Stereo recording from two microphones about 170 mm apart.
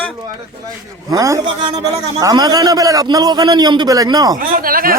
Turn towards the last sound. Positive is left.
turn(degrees=-60)  # may be behind; listen again after turning